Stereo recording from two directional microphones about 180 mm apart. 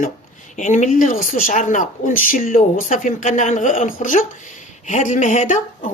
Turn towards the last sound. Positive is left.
turn(degrees=45)  # may be behind; listen again after turning